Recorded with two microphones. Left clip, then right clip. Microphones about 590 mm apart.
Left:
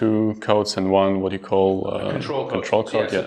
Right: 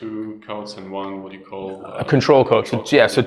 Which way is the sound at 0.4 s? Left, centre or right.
Left.